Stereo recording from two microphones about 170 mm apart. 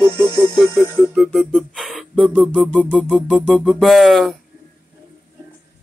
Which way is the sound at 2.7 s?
5° left (ahead or behind).